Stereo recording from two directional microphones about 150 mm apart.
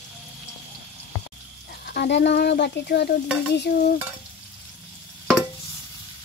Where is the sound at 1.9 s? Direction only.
90° left.